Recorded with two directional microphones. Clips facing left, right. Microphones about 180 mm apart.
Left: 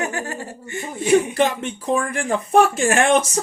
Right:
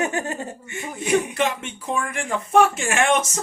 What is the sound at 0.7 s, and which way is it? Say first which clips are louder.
Speech: left 5 dB; 35° left (ahead or behind).